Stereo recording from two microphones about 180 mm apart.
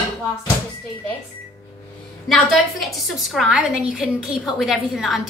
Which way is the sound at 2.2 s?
Centre (ahead or behind).